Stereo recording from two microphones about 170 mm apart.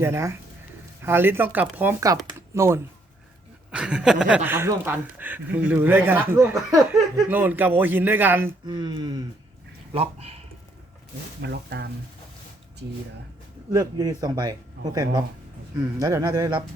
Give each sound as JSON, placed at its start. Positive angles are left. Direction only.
{"t": 0.0, "sound": "speech", "side_deg": -15}
{"t": 8.6, "sound": "speech", "side_deg": -25}
{"t": 9.9, "sound": "speech", "side_deg": -35}
{"t": 11.4, "sound": "speech", "side_deg": -75}
{"t": 13.7, "sound": "speech", "side_deg": -20}
{"t": 14.8, "sound": "speech", "side_deg": -80}
{"t": 15.8, "sound": "speech", "side_deg": -20}